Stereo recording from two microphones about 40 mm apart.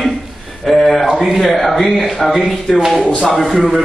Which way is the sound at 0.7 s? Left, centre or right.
Centre.